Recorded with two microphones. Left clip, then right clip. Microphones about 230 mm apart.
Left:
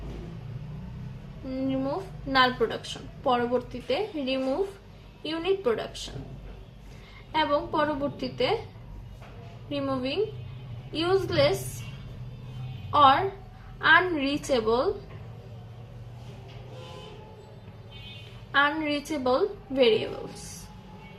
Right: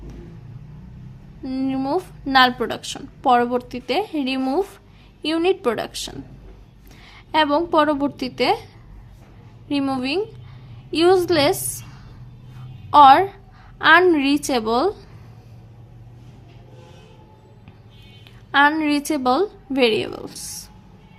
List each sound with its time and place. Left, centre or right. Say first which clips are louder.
1.5 s a woman's voice: right 6 dB; right
7.3 s a woman's voice: right 8 dB; right
9.6 s a woman's voice: right 7 dB; right
12.9 s a woman's voice: right 9 dB; right
18.5 s a woman's voice: right 8 dB; right